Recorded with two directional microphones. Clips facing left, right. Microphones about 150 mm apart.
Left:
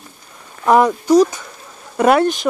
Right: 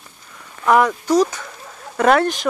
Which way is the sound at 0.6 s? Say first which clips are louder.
Left 2 dB; 25° left (ahead or behind).